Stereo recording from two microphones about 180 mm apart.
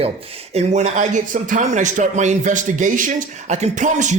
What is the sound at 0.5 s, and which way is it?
A man's voice, 40° right (ahead or behind).